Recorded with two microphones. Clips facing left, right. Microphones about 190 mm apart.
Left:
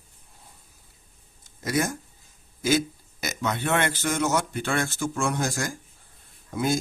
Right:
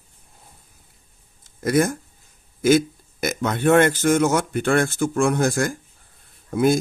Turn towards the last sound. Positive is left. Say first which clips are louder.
# right 7 dB
turn(degrees=-55)  # may be behind; listen again after turning